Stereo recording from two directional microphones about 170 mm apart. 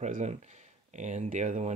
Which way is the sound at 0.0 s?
40° right (ahead or behind).